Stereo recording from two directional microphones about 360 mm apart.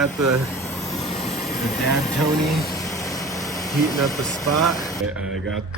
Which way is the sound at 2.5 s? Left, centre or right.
Centre.